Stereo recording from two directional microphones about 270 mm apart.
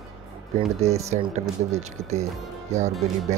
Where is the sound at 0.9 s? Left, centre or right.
Right.